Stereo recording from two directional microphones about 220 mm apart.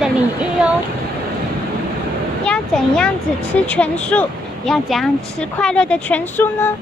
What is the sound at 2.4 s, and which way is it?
Speech, 5° left (ahead or behind).